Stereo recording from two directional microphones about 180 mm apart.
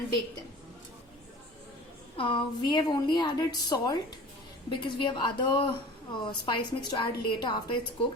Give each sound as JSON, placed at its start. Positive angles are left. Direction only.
{"t": 2.1, "sound": "a woman's voice", "side_deg": 30}